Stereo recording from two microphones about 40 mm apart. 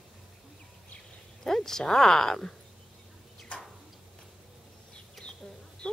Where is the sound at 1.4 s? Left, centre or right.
Centre.